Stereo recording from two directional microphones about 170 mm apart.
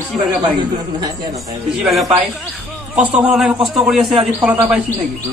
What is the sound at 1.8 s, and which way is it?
Speech, centre (ahead or behind).